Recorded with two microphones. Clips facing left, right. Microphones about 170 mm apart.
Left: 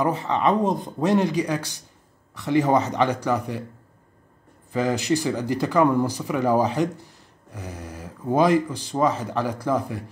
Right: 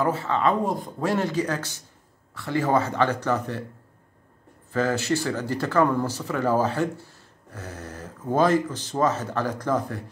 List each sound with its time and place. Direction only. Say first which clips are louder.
0.0 s speech: left 1 dB; 15° left (ahead or behind)
4.7 s speech: left 1 dB; 15° left (ahead or behind)